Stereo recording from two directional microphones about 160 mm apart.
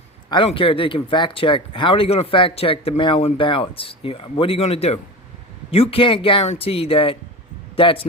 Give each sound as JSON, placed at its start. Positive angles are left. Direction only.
{"t": 0.3, "sound": "speech", "side_deg": 30}